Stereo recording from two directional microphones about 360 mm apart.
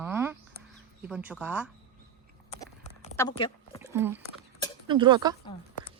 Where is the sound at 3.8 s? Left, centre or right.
Centre.